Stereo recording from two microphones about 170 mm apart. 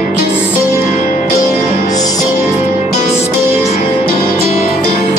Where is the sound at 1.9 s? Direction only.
20° left (ahead or behind).